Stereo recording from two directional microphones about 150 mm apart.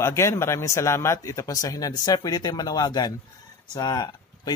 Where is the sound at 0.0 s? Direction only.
20° left (ahead or behind).